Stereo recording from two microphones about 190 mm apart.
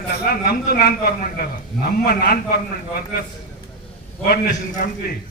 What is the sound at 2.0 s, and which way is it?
Speech, 55° left (ahead or behind).